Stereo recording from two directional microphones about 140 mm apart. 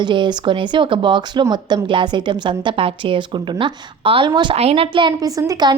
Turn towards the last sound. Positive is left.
turn(degrees=-25)  # may be behind; listen again after turning